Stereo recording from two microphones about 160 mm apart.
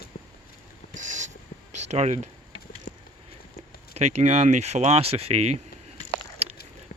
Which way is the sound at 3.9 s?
45° right (ahead or behind).